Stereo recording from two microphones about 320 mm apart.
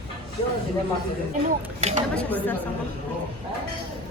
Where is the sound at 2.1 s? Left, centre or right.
Centre.